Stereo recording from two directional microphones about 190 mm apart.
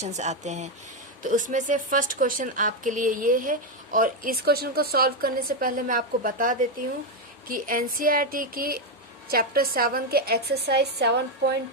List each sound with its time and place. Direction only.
0.0 s speech: 40° right (ahead or behind); by 11.5 s 60° right (ahead or behind)